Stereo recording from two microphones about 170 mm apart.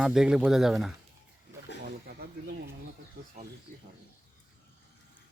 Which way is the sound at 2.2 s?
65° right (ahead or behind).